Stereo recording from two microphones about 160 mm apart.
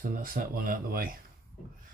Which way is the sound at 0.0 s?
65° right (ahead or behind).